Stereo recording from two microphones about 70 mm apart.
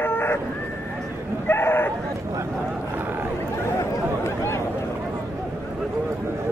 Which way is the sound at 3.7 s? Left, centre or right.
Left.